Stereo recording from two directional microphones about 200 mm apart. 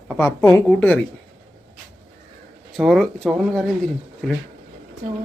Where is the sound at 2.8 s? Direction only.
Centre (ahead or behind).